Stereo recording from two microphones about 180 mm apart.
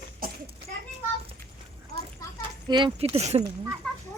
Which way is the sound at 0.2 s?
55° right (ahead or behind).